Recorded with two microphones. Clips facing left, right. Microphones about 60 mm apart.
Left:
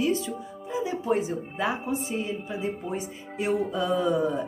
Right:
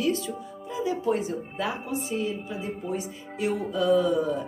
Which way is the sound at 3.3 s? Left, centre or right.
Left.